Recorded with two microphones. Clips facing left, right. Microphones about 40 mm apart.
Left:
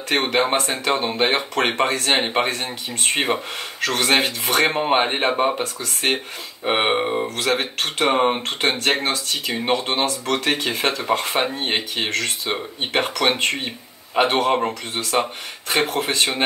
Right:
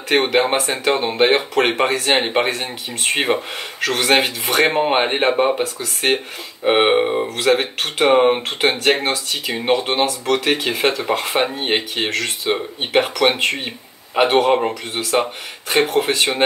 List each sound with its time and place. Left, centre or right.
0.1 s speech: centre